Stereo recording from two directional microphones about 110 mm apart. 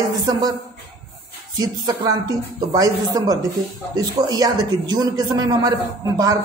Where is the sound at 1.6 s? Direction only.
35° right (ahead or behind).